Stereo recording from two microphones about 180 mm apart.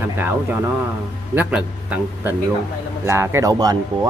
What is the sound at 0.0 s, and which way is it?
Speech, 10° right (ahead or behind).